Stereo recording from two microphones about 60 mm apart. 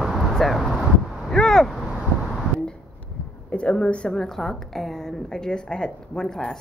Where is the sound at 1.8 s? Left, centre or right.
Centre.